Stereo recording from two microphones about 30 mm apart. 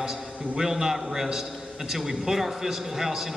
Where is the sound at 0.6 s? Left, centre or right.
Centre.